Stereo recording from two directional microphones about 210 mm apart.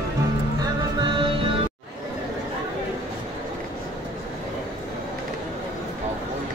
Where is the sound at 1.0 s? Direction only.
25° right (ahead or behind).